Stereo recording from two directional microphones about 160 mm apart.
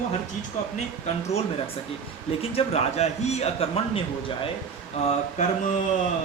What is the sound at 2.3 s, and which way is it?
A man's voice, 40° left (ahead or behind).